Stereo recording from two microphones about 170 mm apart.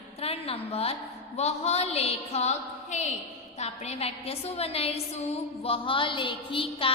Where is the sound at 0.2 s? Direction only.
35° left (ahead or behind).